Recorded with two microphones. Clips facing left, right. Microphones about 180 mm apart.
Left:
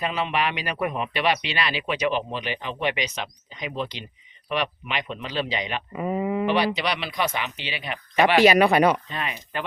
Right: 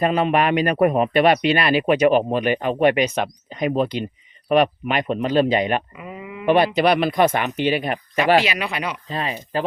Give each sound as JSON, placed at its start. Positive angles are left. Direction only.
{"t": 0.0, "sound": "speech", "side_deg": -50}
{"t": 6.0, "sound": "speech", "side_deg": 45}
{"t": 6.4, "sound": "speech", "side_deg": -50}
{"t": 8.4, "sound": "speech", "side_deg": 45}
{"t": 9.0, "sound": "speech", "side_deg": -35}